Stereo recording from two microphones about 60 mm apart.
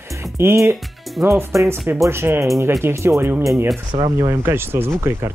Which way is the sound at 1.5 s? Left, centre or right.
Right.